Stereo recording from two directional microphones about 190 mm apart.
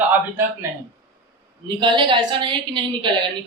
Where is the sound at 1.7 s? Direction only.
25° right (ahead or behind).